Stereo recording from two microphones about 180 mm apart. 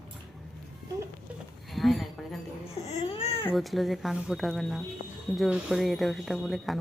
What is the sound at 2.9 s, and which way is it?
Baby cry, 35° left (ahead or behind).